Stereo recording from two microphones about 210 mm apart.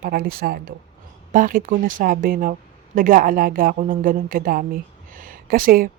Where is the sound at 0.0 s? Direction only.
45° right (ahead or behind).